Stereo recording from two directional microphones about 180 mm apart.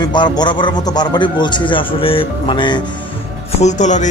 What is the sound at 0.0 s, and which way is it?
A man's voice, 25° left (ahead or behind).